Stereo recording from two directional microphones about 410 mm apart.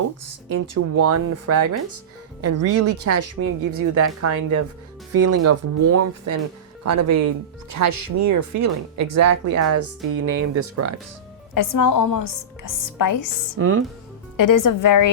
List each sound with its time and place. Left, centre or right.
0.7 s speech: right
11.5 s speech: left
13.6 s speech: right
14.3 s speech: left